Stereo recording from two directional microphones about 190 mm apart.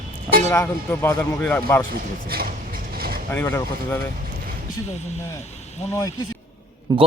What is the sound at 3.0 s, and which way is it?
Vehicle, 50° right (ahead or behind).